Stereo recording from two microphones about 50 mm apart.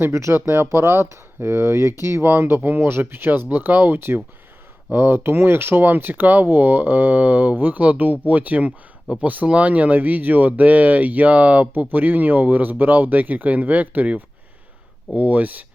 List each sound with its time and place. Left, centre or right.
0.1 s speech: right
0.3 s speech: right